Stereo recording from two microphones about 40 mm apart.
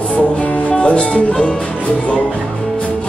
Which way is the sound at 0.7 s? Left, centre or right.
Left.